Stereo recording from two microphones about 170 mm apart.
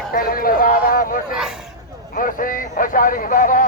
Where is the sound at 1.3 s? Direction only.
5° right (ahead or behind).